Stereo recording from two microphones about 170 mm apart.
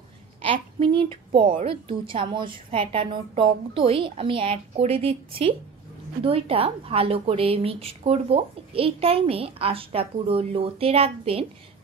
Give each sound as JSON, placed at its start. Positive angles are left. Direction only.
{"t": 0.4, "sound": "a woman's voice", "side_deg": -35}